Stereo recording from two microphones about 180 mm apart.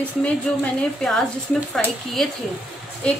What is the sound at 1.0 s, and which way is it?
Speech, 5° left (ahead or behind).